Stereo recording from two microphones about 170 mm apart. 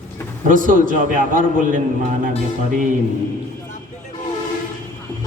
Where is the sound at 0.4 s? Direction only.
50° right (ahead or behind).